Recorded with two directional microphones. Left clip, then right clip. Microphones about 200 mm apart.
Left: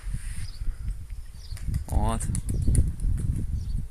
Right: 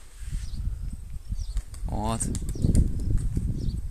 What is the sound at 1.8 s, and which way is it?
Speech, 10° right (ahead or behind).